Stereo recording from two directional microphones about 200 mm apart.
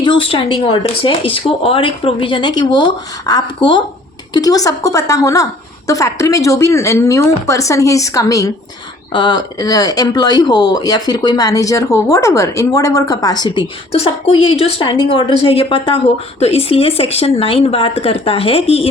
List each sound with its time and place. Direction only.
0.0 s speech: 25° left (ahead or behind)